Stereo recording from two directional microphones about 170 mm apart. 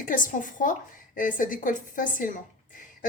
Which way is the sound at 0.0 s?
55° left (ahead or behind).